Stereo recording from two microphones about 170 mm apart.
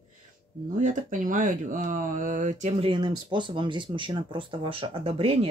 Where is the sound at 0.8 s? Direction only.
50° right (ahead or behind).